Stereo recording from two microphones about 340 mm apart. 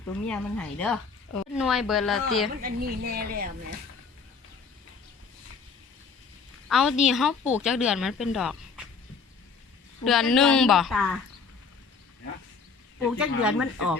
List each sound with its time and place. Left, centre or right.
0.3 s speech: centre
2.6 s a woman's voice: right
6.7 s a woman's voice: centre
10.0 s speech: centre
13.1 s speech: centre